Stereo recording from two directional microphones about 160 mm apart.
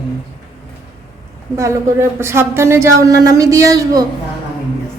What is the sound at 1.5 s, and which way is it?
Speech, 15° right (ahead or behind).